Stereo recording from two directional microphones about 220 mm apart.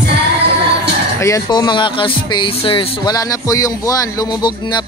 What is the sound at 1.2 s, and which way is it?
Speech, 15° left (ahead or behind).